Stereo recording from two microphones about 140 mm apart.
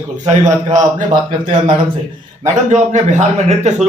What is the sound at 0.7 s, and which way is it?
Speech, 60° right (ahead or behind).